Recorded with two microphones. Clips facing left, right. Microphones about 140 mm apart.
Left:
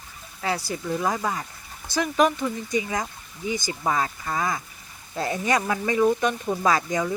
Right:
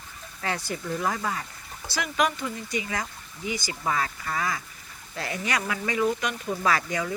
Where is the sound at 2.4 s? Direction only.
25° left (ahead or behind).